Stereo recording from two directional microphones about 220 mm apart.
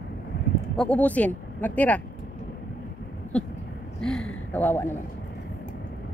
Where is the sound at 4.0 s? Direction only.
Centre (ahead or behind).